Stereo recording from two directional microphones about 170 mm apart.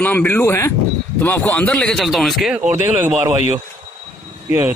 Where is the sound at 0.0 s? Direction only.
10° left (ahead or behind).